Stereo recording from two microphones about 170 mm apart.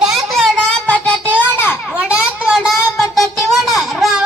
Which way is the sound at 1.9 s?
5° right (ahead or behind).